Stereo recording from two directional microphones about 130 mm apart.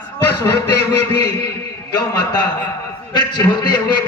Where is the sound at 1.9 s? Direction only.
30° left (ahead or behind).